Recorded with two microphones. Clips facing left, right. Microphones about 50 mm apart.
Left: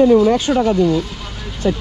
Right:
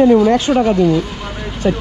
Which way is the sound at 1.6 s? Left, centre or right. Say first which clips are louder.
Right 2 dB; right.